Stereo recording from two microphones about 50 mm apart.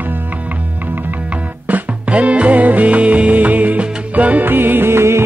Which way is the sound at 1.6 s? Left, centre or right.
Right.